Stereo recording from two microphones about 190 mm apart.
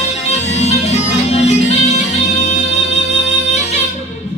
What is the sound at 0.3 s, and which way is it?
Music, 35° left (ahead or behind).